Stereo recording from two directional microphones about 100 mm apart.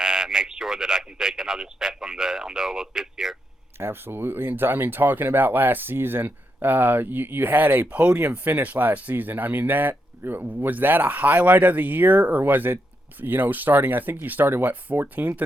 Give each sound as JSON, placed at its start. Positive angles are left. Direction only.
{"t": 0.0, "sound": "a man's voice", "side_deg": -5}
{"t": 3.8, "sound": "speech", "side_deg": -25}